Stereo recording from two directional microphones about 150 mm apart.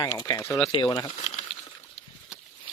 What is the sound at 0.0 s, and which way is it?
Speech, 20° left (ahead or behind).